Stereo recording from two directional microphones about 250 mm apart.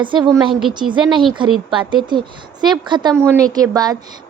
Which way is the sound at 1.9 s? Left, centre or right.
Centre.